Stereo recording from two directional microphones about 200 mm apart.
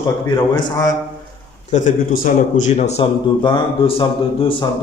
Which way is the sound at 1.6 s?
40° left (ahead or behind).